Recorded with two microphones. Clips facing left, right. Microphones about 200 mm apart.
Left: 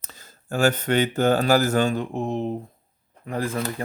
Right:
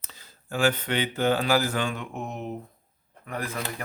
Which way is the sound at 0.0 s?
45° left (ahead or behind).